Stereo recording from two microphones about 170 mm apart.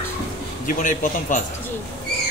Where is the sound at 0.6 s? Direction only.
50° left (ahead or behind).